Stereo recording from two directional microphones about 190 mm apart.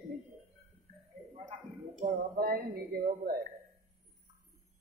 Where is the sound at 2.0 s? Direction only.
50° right (ahead or behind).